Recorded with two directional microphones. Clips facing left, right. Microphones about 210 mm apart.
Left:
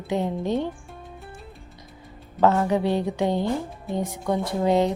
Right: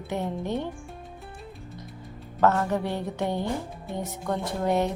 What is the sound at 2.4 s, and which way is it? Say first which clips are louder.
A woman's voice: left 3 dB; 15° left (ahead or behind).